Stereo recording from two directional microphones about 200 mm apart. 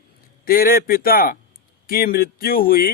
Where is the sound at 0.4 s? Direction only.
45° left (ahead or behind).